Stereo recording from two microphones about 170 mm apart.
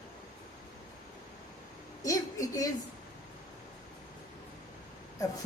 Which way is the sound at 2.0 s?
20° left (ahead or behind).